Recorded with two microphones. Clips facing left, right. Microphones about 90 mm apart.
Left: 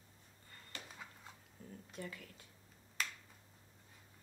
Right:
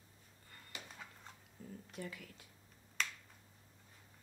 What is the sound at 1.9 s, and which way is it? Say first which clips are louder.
Speech: even; 35° left (ahead or behind).